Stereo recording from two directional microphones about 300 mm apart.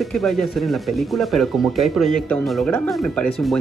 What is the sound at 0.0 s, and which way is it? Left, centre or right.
Speech, centre.